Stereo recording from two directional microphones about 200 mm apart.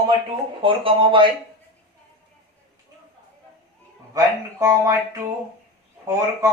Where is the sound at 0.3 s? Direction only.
25° right (ahead or behind).